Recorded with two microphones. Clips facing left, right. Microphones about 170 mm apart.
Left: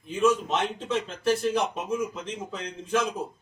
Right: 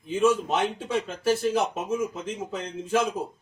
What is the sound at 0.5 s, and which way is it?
Speech, 10° right (ahead or behind).